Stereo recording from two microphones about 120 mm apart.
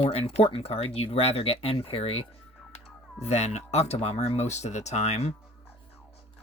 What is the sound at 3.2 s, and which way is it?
Speech, 60° left (ahead or behind).